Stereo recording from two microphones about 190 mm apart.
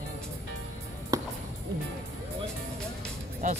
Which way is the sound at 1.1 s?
15° right (ahead or behind).